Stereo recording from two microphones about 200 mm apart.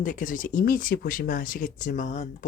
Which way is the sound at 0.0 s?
40° left (ahead or behind).